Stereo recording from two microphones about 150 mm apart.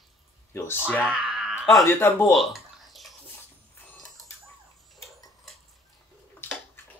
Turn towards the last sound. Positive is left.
turn(degrees=15)  # may be behind; listen again after turning